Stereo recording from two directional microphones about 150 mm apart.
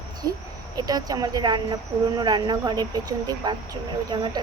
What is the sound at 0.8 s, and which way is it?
A woman's voice, 25° right (ahead or behind).